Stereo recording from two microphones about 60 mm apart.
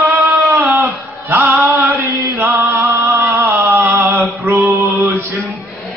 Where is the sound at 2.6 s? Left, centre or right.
Right.